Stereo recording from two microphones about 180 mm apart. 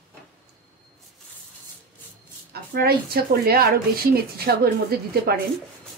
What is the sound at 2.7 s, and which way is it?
Speech, 60° right (ahead or behind).